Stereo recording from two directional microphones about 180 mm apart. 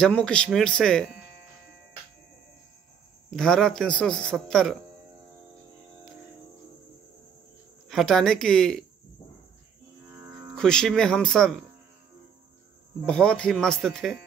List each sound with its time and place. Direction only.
0.0 s a man's voice: 5° left (ahead or behind)
3.3 s a man's voice: 5° left (ahead or behind)
7.9 s a man's voice: centre (ahead or behind)
10.0 s music: 15° right (ahead or behind)
10.5 s a man's voice: 5° left (ahead or behind)
13.0 s a man's voice: 5° left (ahead or behind)